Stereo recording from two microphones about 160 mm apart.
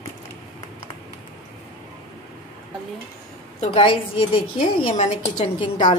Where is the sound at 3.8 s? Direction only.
30° left (ahead or behind).